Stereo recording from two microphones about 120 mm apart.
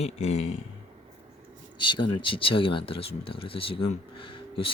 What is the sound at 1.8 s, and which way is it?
Speech, 40° left (ahead or behind).